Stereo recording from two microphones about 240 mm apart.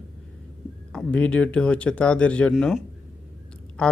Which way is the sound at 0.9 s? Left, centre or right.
Centre.